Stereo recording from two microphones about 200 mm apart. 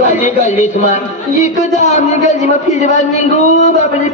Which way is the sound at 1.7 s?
35° left (ahead or behind).